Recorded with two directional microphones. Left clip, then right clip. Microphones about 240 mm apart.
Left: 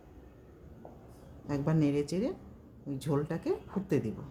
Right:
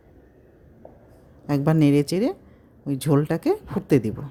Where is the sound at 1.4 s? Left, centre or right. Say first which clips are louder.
Right 11 dB; right.